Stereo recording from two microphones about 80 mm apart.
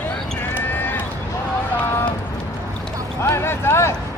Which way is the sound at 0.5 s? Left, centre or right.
Left.